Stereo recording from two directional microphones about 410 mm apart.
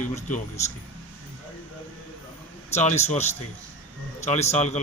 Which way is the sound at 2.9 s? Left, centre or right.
Centre.